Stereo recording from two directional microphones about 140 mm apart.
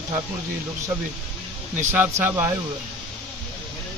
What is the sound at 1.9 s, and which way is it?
Speech, 15° right (ahead or behind).